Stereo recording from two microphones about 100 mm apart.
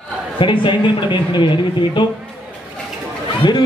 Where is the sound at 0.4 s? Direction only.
55° left (ahead or behind).